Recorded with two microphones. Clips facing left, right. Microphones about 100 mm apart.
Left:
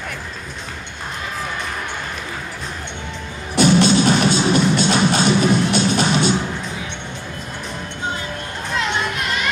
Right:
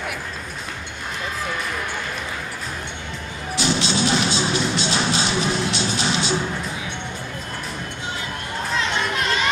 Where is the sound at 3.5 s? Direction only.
50° left (ahead or behind).